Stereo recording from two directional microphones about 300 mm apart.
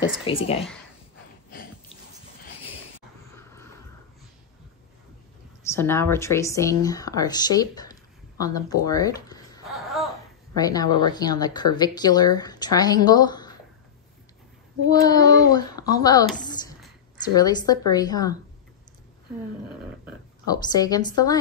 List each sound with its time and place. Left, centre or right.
0.3 s speech: centre
5.7 s speech: centre
9.7 s laughter: centre
10.5 s speech: centre
15.0 s speech: centre
17.4 s speech: centre
20.4 s speech: centre